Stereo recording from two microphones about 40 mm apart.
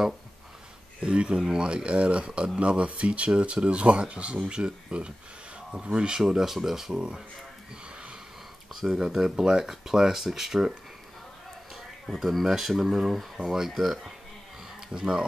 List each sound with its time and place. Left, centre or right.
1.0 s speech: right
6.2 s speech: centre
6.9 s speech: right
8.7 s speech: centre
12.1 s speech: centre
14.9 s speech: right